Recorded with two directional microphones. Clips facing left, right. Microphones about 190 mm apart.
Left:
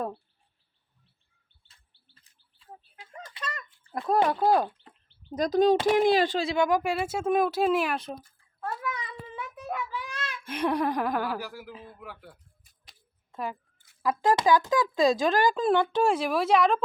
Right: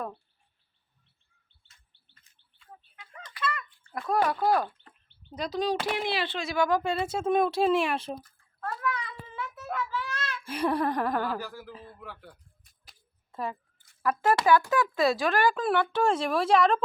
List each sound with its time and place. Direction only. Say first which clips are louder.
2.1 s chirp: right 1 dB; 30° left (ahead or behind)
3.4 s a sound: right 6 dB; 40° left (ahead or behind)
3.8 s a child's voice: left 2 dB; 20° left (ahead or behind)
5.3 s speech: left 7 dB; 45° left (ahead or behind)
6.5 s speech: left 1 dB; 20° left (ahead or behind); by 8.0 s centre (ahead or behind)
8.2 s a sound: left 1 dB; 15° left (ahead or behind)
10.5 s speech: left 1 dB; centre (ahead or behind)
12.8 s a sound: even; centre (ahead or behind)
14.0 s speech: left 1 dB; 15° left (ahead or behind)
16.2 s speech: even; 5° left (ahead or behind)